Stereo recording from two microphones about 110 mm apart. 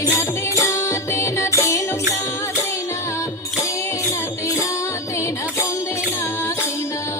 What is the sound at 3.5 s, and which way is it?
Music, 30° left (ahead or behind).